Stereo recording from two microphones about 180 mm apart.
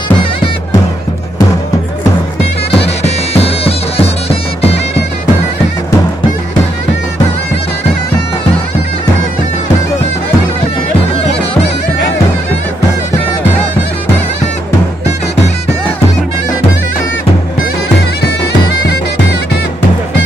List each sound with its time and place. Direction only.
2.7 s bagpipes: 35° left (ahead or behind)